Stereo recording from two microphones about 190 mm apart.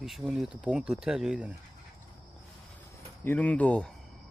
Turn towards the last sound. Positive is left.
turn(degrees=5)  # may be behind; listen again after turning